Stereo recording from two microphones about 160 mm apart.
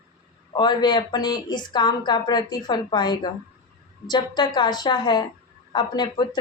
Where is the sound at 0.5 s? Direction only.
25° left (ahead or behind).